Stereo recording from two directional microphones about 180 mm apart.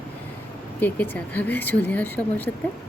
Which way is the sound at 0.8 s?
10° left (ahead or behind).